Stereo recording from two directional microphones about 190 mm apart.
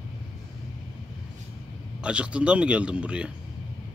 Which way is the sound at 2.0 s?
5° right (ahead or behind).